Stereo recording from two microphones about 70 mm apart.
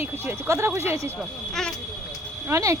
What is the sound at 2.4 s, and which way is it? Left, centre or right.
Speech, right.